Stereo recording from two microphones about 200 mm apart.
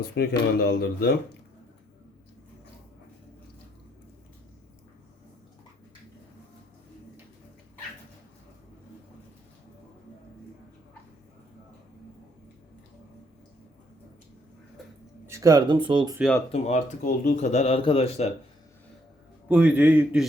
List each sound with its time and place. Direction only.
0.0 s speech: 55° left (ahead or behind)
15.3 s speech: 15° right (ahead or behind)
16.5 s speech: 35° left (ahead or behind)
19.5 s a man's voice: 5° right (ahead or behind)